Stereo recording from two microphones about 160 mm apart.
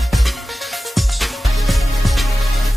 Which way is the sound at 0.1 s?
Centre (ahead or behind).